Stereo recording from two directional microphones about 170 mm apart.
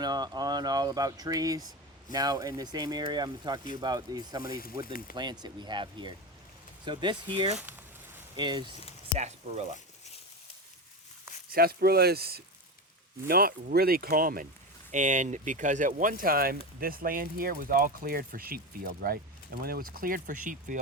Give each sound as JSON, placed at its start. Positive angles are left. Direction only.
{"t": 0.0, "sound": "speech", "side_deg": -25}
{"t": 4.9, "sound": "speech", "side_deg": 60}
{"t": 5.1, "sound": "speech", "side_deg": -25}
{"t": 7.5, "sound": "speech", "side_deg": -10}
{"t": 8.4, "sound": "speech", "side_deg": -25}
{"t": 9.1, "sound": "speech", "side_deg": -40}
{"t": 11.5, "sound": "speech", "side_deg": -65}
{"t": 14.9, "sound": "speech", "side_deg": -45}